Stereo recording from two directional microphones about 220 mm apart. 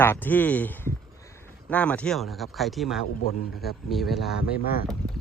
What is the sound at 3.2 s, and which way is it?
Speech, 45° left (ahead or behind).